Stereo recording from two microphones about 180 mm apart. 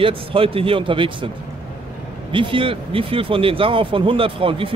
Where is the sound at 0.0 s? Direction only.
30° right (ahead or behind).